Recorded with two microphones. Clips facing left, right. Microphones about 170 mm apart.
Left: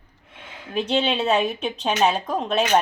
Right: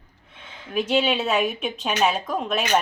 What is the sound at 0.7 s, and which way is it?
A woman's voice, 30° left (ahead or behind).